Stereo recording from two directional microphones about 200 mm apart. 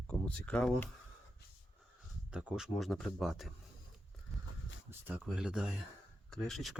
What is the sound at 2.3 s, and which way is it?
Speech, 5° right (ahead or behind).